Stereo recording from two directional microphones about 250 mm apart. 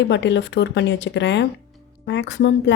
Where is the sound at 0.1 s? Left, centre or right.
Left.